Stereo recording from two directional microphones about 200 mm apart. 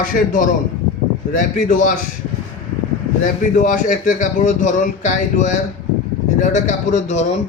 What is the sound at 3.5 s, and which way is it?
Speech, 40° left (ahead or behind).